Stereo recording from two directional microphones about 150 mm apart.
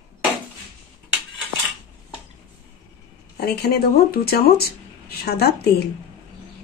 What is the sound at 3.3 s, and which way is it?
Speech, 90° left.